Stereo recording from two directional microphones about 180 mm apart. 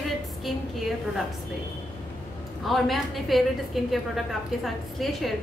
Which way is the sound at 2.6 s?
Centre (ahead or behind).